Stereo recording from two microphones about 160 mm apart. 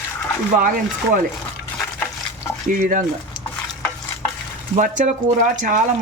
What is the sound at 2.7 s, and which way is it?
Speech, 55° right (ahead or behind).